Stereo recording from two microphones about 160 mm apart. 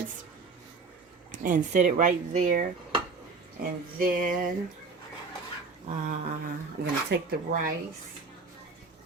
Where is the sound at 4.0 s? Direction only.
60° right (ahead or behind).